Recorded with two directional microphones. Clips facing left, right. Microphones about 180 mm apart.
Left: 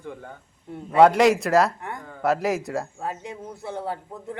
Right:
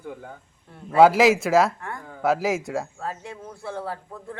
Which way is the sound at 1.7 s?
20° left (ahead or behind).